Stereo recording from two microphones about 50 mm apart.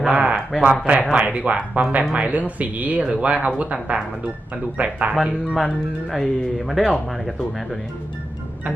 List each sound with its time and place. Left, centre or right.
0.1 s speech: right
6.1 s speech: centre